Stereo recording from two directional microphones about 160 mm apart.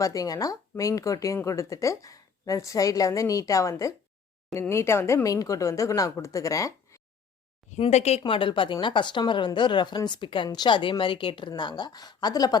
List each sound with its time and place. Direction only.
0.0 s a woman's voice: 20° left (ahead or behind)
7.7 s speech: 45° left (ahead or behind)
8.2 s a woman's voice: 30° left (ahead or behind)